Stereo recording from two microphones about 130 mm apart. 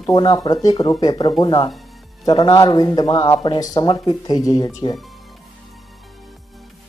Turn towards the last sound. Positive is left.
turn(degrees=30)  # may be behind; listen again after turning